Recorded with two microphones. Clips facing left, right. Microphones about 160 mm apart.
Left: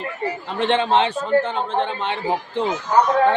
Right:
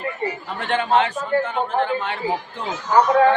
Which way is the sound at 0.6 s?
25° left (ahead or behind).